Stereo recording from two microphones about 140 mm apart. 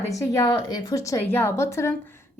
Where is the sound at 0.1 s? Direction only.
25° left (ahead or behind).